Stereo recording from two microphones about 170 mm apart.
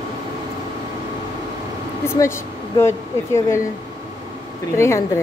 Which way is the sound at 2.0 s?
15° left (ahead or behind).